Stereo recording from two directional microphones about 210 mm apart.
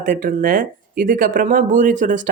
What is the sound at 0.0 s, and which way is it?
Speech, 40° right (ahead or behind).